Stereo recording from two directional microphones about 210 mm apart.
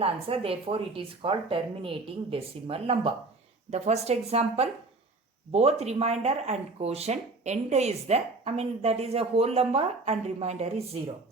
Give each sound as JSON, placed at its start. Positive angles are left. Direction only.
{"t": 0.0, "sound": "speech", "side_deg": -25}